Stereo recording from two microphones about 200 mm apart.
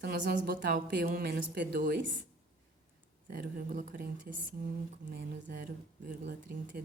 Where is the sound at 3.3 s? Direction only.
40° right (ahead or behind).